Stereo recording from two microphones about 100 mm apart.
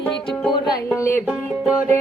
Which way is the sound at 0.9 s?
30° left (ahead or behind).